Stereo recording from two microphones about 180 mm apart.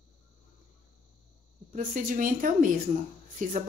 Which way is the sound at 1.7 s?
50° right (ahead or behind).